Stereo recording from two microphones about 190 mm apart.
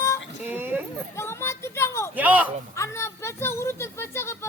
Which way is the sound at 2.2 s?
10° right (ahead or behind).